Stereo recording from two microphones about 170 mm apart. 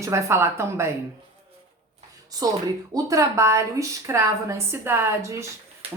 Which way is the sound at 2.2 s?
20° right (ahead or behind).